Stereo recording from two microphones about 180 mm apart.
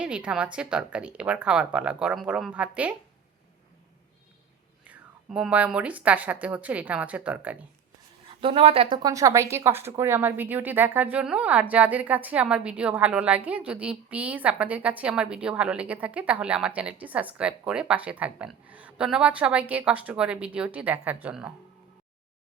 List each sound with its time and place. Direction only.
0.0 s speech: 5° right (ahead or behind)
4.9 s a woman's voice: 5° right (ahead or behind)
8.4 s a woman's voice: 30° right (ahead or behind); by 21.5 s 5° right (ahead or behind)